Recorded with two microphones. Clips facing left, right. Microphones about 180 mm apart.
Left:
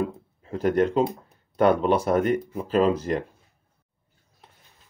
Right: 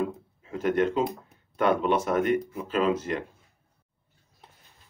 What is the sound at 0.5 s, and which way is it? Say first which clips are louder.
Speech: left 3 dB; 35° left (ahead or behind).